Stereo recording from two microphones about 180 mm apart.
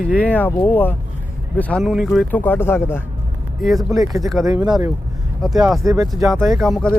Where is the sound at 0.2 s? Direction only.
10° left (ahead or behind).